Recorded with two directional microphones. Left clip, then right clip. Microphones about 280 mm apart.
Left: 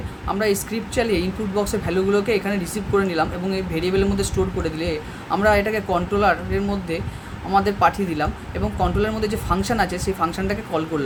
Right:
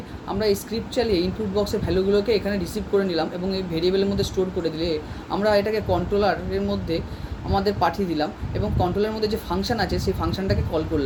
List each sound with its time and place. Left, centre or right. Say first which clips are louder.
0.3 s speech: even; centre